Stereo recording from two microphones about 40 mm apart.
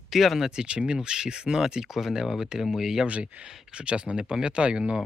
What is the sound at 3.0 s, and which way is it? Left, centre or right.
Speech, right.